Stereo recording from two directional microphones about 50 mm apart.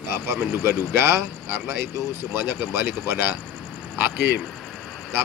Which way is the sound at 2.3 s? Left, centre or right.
Right.